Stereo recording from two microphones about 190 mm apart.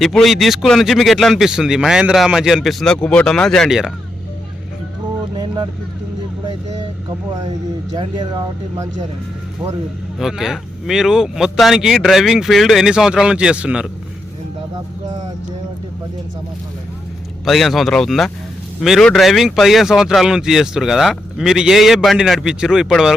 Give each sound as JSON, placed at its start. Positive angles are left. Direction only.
{"t": 0.0, "sound": "speech", "side_deg": 0}
{"t": 7.9, "sound": "speech", "side_deg": -25}
{"t": 10.2, "sound": "speech", "side_deg": 0}
{"t": 17.4, "sound": "speech", "side_deg": 0}